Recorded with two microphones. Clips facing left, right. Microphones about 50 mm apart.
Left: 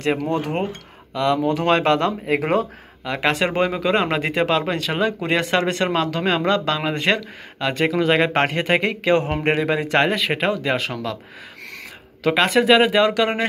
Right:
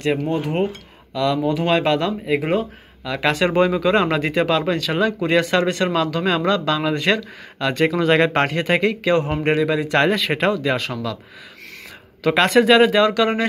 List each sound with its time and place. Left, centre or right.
0.2 s speech: left
1.1 s speech: left
1.4 s speech: left
3.0 s speech: left
7.5 s speech: centre
8.3 s a man's voice: left
10.0 s speech: centre
10.5 s speech: left
12.4 s speech: centre
12.8 s speech: left